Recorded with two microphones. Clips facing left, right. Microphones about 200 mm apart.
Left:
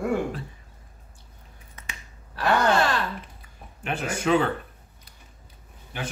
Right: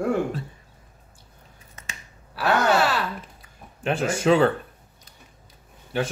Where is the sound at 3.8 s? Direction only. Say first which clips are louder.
Right 5 dB; 30° right (ahead or behind).